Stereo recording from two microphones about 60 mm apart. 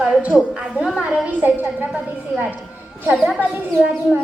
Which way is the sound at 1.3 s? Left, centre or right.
Right.